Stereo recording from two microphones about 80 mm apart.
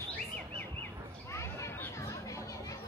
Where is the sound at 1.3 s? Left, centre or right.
Left.